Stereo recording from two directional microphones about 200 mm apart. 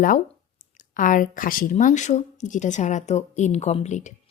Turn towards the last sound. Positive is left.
turn(degrees=35)  # may be behind; listen again after turning